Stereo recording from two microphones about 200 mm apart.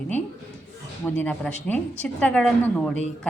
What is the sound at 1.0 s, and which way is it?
A woman's voice, 10° left (ahead or behind).